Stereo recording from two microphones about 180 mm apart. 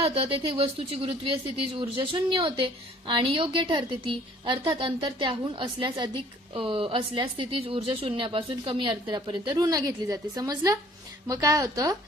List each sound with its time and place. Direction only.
0.0 s speech: 30° right (ahead or behind)